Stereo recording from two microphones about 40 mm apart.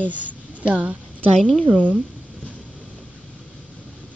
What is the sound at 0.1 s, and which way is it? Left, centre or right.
A woman's voice, right.